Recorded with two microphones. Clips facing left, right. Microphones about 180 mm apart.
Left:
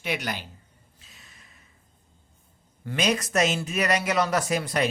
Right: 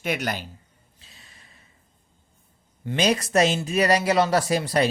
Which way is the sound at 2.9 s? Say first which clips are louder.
Right 3 dB; 30° right (ahead or behind).